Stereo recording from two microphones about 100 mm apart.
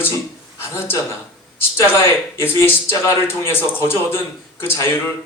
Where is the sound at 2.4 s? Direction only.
25° left (ahead or behind).